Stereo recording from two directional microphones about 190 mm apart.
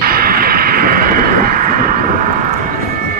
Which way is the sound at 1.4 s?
45° right (ahead or behind).